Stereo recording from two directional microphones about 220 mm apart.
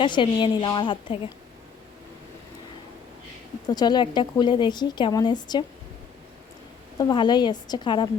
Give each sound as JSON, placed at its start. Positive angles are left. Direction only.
{"t": 0.0, "sound": "speech", "side_deg": 20}
{"t": 3.7, "sound": "speech", "side_deg": 20}
{"t": 7.0, "sound": "speech", "side_deg": 20}